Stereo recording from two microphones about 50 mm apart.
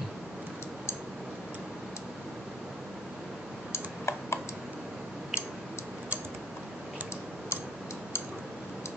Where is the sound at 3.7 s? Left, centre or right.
Left.